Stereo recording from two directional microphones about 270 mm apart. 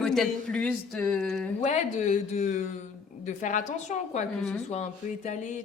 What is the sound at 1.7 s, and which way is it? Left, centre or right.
Speech, left.